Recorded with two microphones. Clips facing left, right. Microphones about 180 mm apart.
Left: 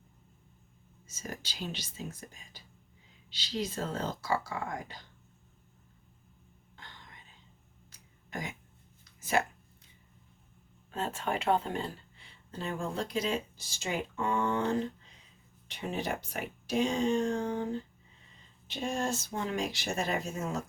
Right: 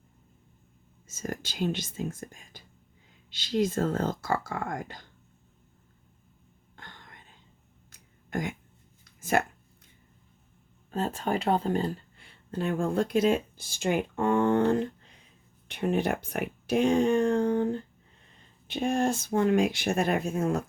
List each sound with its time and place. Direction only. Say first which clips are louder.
1.0 s speech: right 7 dB; 50° right (ahead or behind)
6.7 s whispering: right 3 dB; 50° right (ahead or behind)
7.9 s a sound: right 8 dB; 50° right (ahead or behind)
9.2 s speech: right 4 dB; 50° right (ahead or behind)
10.9 s speech: right 5 dB; 40° right (ahead or behind)
12.1 s speech: right 9 dB; 55° right (ahead or behind)
18.7 s speech: right 7 dB; 60° right (ahead or behind)